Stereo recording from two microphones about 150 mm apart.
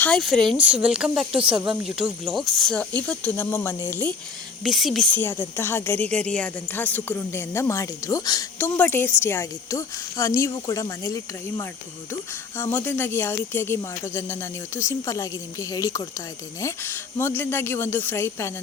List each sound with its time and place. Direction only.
0.0 s speech: 5° left (ahead or behind)
4.6 s speech: centre (ahead or behind)
5.1 s speech: 15° left (ahead or behind)
8.5 s speech: 15° left (ahead or behind)
12.7 s speech: 15° left (ahead or behind)